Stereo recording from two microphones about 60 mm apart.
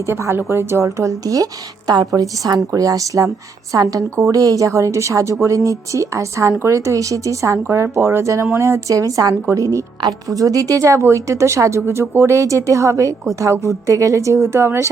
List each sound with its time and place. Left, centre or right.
0.1 s a woman's voice: right
0.9 s speech: right